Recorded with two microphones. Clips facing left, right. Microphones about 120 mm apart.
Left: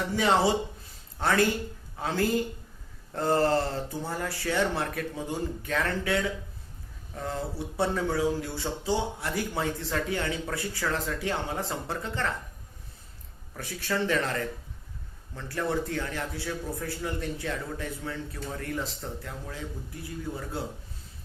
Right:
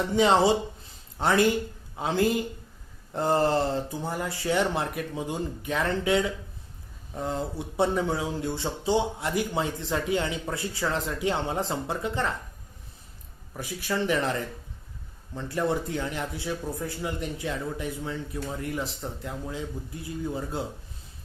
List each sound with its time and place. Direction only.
0.1 s speech: 20° right (ahead or behind)
13.5 s speech: 15° right (ahead or behind)